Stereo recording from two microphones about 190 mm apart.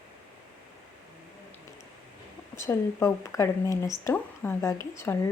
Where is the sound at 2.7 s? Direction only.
15° left (ahead or behind).